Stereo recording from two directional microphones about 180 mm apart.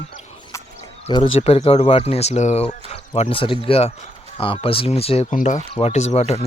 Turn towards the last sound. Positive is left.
turn(degrees=35)  # may be behind; listen again after turning